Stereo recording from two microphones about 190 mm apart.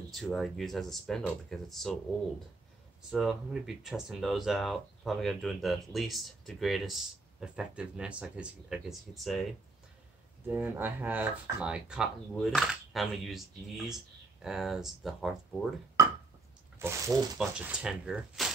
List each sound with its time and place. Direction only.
0.1 s speech: centre (ahead or behind)
3.1 s speech: centre (ahead or behind)
16.0 s a sound: 20° right (ahead or behind)
16.7 s speech: 15° right (ahead or behind)
17.4 s speech: 5° right (ahead or behind)